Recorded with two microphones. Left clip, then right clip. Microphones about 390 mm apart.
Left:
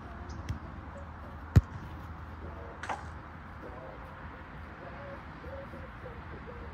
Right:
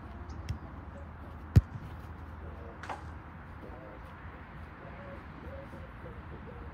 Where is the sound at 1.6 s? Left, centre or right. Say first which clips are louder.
Left 1 dB; centre.